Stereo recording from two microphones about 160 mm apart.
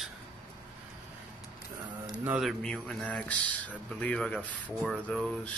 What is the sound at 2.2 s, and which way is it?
Speech, 10° right (ahead or behind).